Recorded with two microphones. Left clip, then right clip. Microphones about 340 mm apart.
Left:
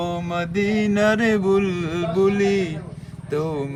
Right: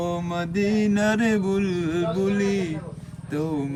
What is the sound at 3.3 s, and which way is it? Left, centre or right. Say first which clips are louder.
Speech: left 4 dB; centre.